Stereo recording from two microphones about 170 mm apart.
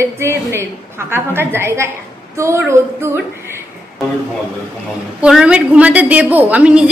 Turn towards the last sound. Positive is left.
turn(degrees=-5)  # may be behind; listen again after turning